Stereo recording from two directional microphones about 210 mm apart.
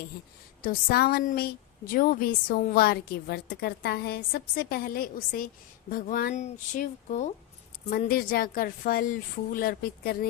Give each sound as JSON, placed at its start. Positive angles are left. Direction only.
{"t": 0.6, "sound": "a woman's voice", "side_deg": 45}